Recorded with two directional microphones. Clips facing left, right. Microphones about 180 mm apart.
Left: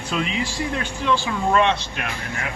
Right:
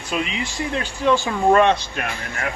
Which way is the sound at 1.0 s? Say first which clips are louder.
Right 5 dB; 45° right (ahead or behind).